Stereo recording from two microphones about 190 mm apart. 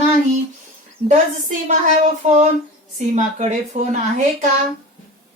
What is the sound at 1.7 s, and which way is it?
A woman's voice, 40° right (ahead or behind).